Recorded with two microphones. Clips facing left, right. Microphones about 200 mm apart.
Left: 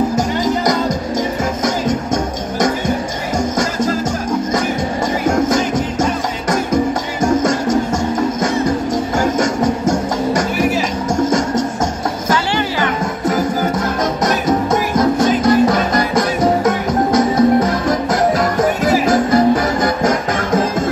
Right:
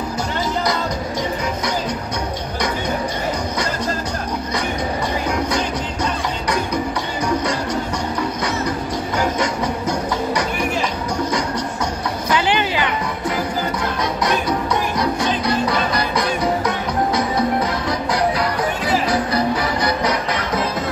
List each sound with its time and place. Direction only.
3.5 s music: 45° left (ahead or behind)
12.4 s music: 20° right (ahead or behind)
12.8 s music: 45° left (ahead or behind)